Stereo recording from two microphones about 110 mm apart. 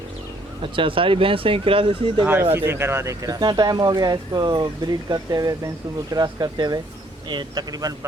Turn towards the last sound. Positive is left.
turn(degrees=-35)  # may be behind; listen again after turning